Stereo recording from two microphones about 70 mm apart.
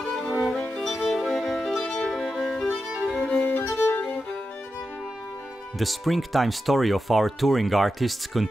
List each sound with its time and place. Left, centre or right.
0.0 s music: centre
3.1 s violin: centre
3.4 s violin: left
5.8 s speech: centre